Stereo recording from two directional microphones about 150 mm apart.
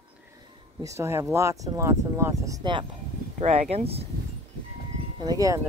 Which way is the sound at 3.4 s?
45° right (ahead or behind).